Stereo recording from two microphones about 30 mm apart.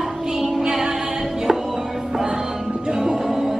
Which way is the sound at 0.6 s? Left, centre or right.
Right.